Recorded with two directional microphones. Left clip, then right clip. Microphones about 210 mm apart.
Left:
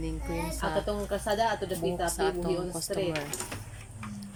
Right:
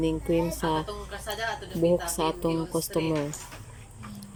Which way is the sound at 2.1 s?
10° right (ahead or behind).